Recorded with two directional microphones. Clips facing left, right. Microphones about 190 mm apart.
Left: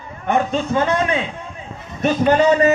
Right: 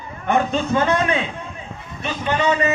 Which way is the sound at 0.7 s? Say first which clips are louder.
Even; 30° left (ahead or behind).